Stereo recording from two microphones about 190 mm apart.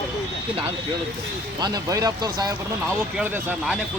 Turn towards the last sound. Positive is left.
turn(degrees=-5)  # may be behind; listen again after turning